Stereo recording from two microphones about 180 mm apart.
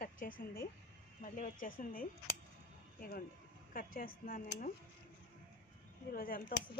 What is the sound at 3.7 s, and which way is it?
Speech, 55° left (ahead or behind).